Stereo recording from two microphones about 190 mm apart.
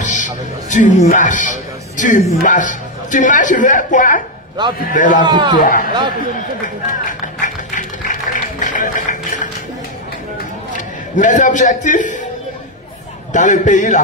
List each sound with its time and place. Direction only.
0.0 s a man's voice: 40° left (ahead or behind)
4.6 s a man's voice: 25° right (ahead or behind)
4.9 s a man's voice: 45° left (ahead or behind)
5.2 s a man's voice: 25° right (ahead or behind)
5.6 s a man's voice: 45° left (ahead or behind)
6.9 s music: 45° left (ahead or behind)
11.1 s a man's voice: 40° left (ahead or behind)
13.3 s a man's voice: 40° left (ahead or behind)